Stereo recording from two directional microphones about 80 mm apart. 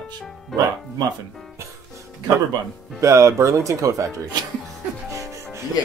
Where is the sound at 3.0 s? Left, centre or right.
Right.